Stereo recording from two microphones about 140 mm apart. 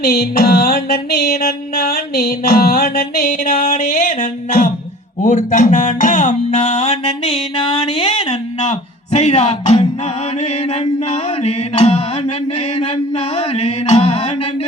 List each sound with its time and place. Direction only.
0.0 s music: 90° left; by 4.7 s 65° left (ahead or behind)
5.2 s speech: 70° left (ahead or behind)
5.7 s music: 70° left (ahead or behind); by 8.7 s 45° left (ahead or behind)
9.1 s speech: 45° left (ahead or behind)
11.4 s music: 45° left (ahead or behind)
13.6 s a sound: 45° left (ahead or behind)